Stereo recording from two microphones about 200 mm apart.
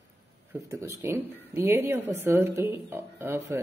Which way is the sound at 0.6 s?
15° right (ahead or behind).